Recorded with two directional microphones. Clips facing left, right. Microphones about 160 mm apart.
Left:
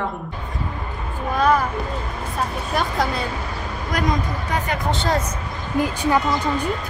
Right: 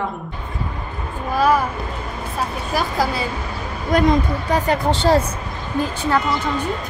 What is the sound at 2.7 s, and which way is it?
Speech, 5° right (ahead or behind).